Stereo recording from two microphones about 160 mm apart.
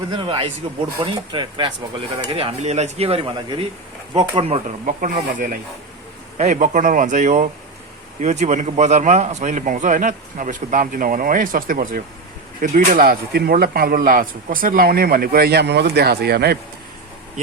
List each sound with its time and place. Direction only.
0.1 s speech: 30° right (ahead or behind)
4.9 s a man's voice: 60° right (ahead or behind); by 16.6 s 85° right